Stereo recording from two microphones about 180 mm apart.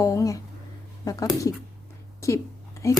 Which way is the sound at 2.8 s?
15° left (ahead or behind).